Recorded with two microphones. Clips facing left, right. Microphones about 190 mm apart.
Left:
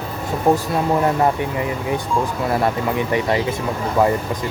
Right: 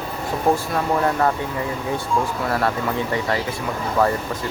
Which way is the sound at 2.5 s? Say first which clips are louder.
Left 2 dB; 20° left (ahead or behind).